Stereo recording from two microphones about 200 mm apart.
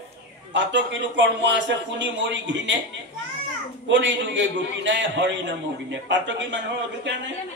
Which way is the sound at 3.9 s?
65° right (ahead or behind).